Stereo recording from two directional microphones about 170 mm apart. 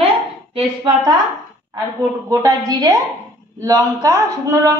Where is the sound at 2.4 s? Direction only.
20° right (ahead or behind).